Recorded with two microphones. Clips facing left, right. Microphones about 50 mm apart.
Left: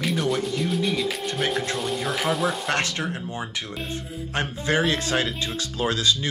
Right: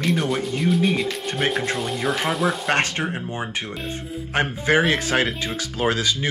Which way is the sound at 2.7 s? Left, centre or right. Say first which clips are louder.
Right 3 dB; right.